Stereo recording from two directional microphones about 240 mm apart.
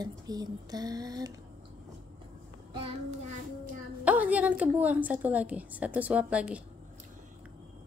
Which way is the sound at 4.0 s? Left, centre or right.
Centre.